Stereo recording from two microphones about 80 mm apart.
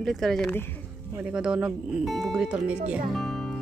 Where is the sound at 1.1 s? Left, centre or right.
Centre.